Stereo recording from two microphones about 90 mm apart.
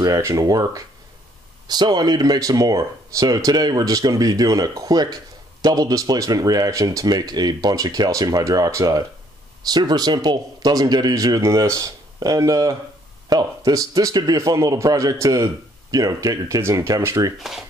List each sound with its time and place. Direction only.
0.0 s speech: 35° right (ahead or behind)